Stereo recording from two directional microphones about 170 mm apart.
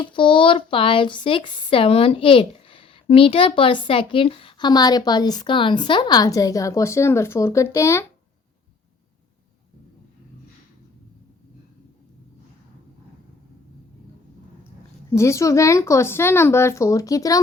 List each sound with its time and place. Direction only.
0.0 s speech: 30° left (ahead or behind)
15.1 s speech: 15° left (ahead or behind)